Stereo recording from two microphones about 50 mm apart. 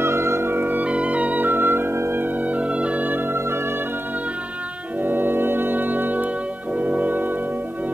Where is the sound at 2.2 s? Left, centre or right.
Right.